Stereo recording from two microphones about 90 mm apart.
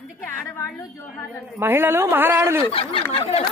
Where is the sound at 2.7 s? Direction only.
90° left.